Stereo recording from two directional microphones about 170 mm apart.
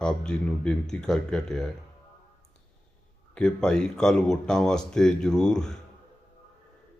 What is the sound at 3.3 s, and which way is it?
Speech, 5° left (ahead or behind).